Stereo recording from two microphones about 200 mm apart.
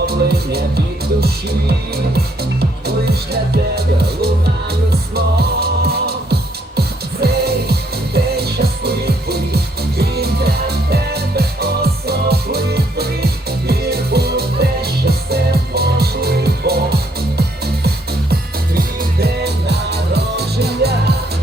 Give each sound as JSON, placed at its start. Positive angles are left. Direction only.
{"t": 0.0, "sound": "music", "side_deg": -50}
{"t": 2.1, "sound": "music", "side_deg": -50}
{"t": 6.7, "sound": "music", "side_deg": -50}